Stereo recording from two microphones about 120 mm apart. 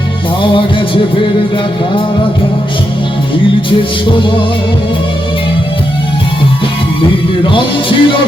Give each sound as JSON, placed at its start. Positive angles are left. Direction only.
{"t": 0.4, "sound": "music", "side_deg": 45}
{"t": 7.0, "sound": "music", "side_deg": 45}